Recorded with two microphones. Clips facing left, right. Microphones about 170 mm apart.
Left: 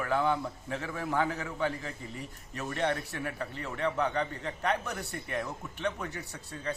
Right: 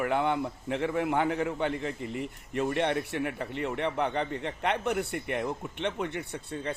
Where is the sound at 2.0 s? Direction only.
70° right (ahead or behind).